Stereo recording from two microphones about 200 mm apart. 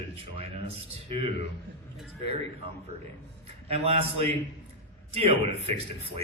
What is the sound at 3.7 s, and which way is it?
A man's voice, 30° right (ahead or behind).